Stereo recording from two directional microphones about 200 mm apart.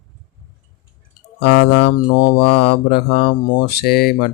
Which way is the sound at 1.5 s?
60° left (ahead or behind).